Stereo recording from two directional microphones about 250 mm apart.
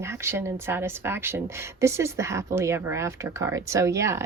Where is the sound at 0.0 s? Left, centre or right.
Centre.